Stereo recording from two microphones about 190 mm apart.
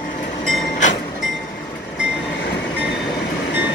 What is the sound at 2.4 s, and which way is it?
Train, 65° left (ahead or behind).